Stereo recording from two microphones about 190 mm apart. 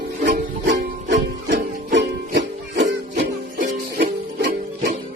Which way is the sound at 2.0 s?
70° right (ahead or behind).